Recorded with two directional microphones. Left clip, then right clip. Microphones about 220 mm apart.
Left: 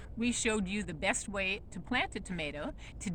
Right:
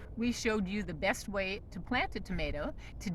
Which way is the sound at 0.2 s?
Centre (ahead or behind).